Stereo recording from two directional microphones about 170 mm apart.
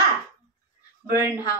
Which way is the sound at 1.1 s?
20° left (ahead or behind).